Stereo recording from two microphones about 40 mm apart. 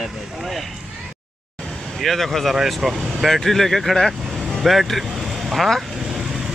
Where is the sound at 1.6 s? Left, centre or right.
Left.